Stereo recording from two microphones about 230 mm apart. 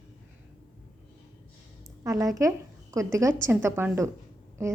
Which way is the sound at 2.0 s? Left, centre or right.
Centre.